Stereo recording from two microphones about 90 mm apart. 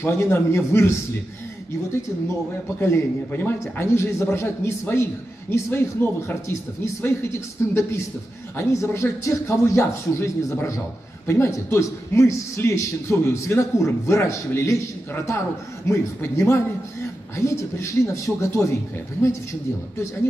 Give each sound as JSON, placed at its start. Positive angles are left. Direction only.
{"t": 0.0, "sound": "a man's voice", "side_deg": 25}
{"t": 2.8, "sound": "a man's voice", "side_deg": 25}